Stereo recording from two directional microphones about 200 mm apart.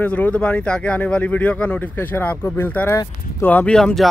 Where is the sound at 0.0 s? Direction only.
5° left (ahead or behind).